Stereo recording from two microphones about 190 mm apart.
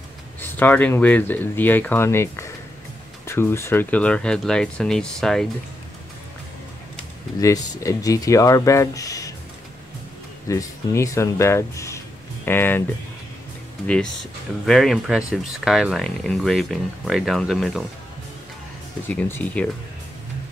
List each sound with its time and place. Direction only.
0.4 s speech: 10° left (ahead or behind)
7.3 s speech: 15° left (ahead or behind)
10.5 s speech: 15° left (ahead or behind)
14.7 s speech: centre (ahead or behind)
19.0 s speech: 10° left (ahead or behind)